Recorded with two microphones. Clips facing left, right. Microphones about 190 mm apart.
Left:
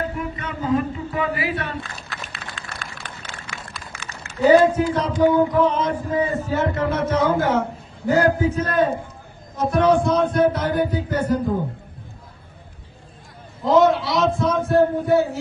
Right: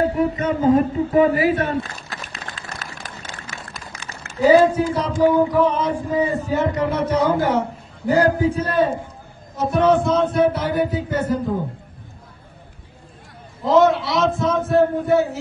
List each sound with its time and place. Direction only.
0.0 s a sound: 40° right (ahead or behind)
4.4 s a man's voice: 10° right (ahead or behind)
13.7 s heart murmur: centre (ahead or behind)